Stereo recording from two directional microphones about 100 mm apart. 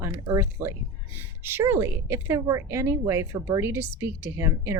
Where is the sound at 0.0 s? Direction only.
30° right (ahead or behind).